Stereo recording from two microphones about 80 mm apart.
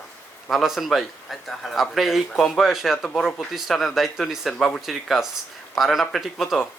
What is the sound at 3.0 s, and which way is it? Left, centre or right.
Speech, centre.